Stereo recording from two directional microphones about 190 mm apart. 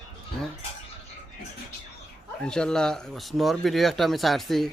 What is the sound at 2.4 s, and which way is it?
Speech, 5° left (ahead or behind).